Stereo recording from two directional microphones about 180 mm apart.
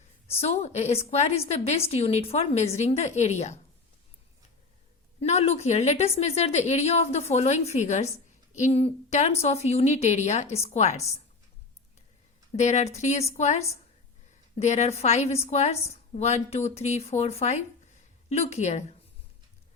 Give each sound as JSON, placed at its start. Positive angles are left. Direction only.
{"t": 0.3, "sound": "a woman's voice", "side_deg": 35}
{"t": 5.2, "sound": "a woman's voice", "side_deg": 35}
{"t": 12.5, "sound": "a woman's voice", "side_deg": 40}